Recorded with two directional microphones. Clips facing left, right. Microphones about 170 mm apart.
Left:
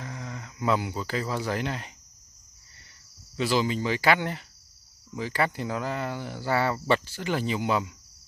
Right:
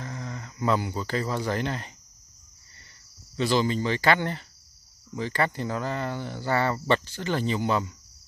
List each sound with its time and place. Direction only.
0.0 s speech: 5° left (ahead or behind)
3.3 s speech: 5° left (ahead or behind)